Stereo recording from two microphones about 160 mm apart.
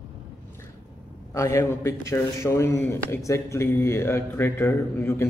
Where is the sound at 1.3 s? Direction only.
20° left (ahead or behind).